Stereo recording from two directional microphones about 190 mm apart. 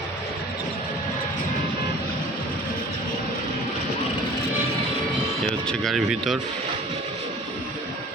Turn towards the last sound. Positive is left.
turn(degrees=0)  # may be behind; listen again after turning